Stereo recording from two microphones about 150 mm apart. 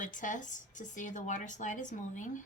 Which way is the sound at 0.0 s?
60° left (ahead or behind).